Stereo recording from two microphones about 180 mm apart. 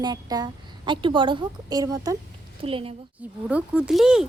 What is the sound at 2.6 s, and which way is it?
Speech, 30° right (ahead or behind).